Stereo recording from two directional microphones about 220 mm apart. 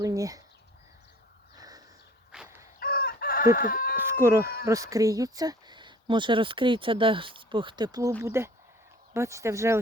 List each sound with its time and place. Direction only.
0.0 s speech: 15° right (ahead or behind)
1.5 s a sound: 15° right (ahead or behind)
2.3 s dog: 5° right (ahead or behind)
2.7 s chicken: 45° left (ahead or behind)
3.9 s speech: 10° right (ahead or behind)